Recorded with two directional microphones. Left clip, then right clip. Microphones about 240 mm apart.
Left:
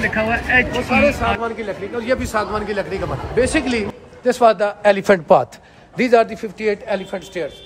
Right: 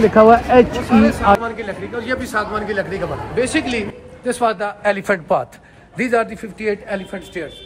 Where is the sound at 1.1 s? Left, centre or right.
Left.